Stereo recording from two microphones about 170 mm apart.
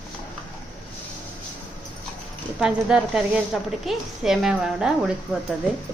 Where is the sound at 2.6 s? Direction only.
5° right (ahead or behind).